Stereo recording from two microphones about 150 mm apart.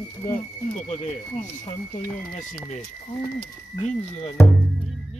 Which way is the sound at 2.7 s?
45° left (ahead or behind).